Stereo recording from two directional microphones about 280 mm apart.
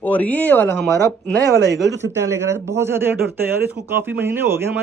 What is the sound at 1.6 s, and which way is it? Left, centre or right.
Speech, right.